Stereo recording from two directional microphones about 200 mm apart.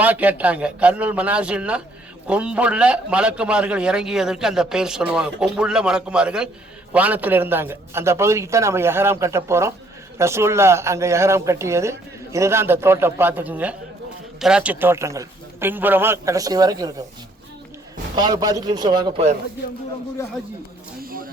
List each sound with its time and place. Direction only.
0.0 s a man's voice: 10° right (ahead or behind)
18.2 s speech: 20° right (ahead or behind)
21.0 s a sound: 45° right (ahead or behind)